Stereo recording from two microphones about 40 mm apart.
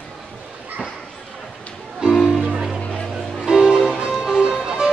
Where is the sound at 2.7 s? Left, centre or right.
Centre.